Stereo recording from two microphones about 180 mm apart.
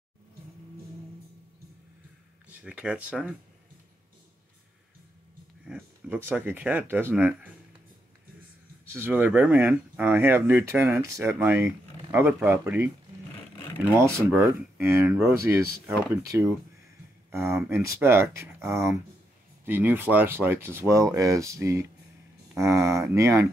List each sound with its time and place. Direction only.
2.6 s speech: 5° right (ahead or behind)
5.7 s speech: 10° right (ahead or behind)
8.8 s speech: 10° right (ahead or behind)
13.9 s speech: 15° right (ahead or behind)
17.6 s speech: 15° right (ahead or behind)